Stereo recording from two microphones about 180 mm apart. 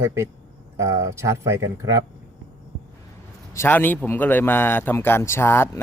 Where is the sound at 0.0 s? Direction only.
15° right (ahead or behind).